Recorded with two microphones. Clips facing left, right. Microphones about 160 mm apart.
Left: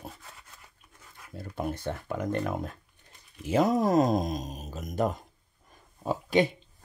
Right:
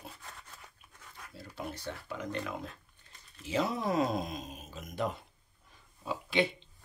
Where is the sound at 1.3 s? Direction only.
50° left (ahead or behind).